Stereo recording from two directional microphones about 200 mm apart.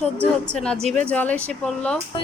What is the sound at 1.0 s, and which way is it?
Speech, 5° left (ahead or behind).